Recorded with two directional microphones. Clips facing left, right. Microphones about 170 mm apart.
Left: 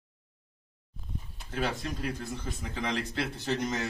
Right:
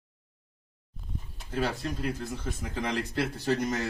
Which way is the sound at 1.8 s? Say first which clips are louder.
Right 2 dB; centre (ahead or behind).